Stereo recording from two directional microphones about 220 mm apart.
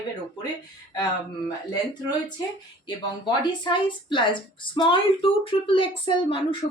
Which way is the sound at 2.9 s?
20° left (ahead or behind).